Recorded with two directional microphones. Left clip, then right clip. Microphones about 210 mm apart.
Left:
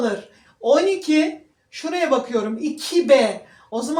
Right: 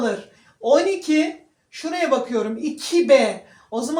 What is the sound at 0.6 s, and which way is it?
Speech, 30° left (ahead or behind).